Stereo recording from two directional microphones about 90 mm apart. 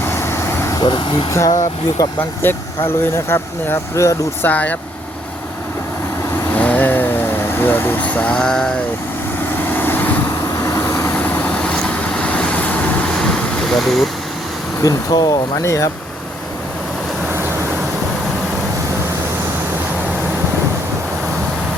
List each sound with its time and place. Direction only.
0.0 s vehicle: 30° left (ahead or behind)
0.8 s speech: 65° left (ahead or behind)
2.0 s speech: 45° left (ahead or behind)
2.4 s speech: 25° left (ahead or behind)
4.4 s speech: 15° left (ahead or behind)
6.5 s vehicle: 15° left (ahead or behind)
9.6 s vehicle: 20° left (ahead or behind)
10.6 s vehicle: 35° left (ahead or behind)
11.1 s vehicle: 20° left (ahead or behind); by 14.1 s 5° left (ahead or behind)
14.8 s speech: 40° left (ahead or behind)